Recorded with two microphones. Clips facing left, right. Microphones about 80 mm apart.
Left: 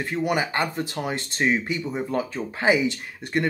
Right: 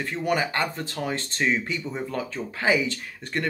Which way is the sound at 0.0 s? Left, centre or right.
Centre.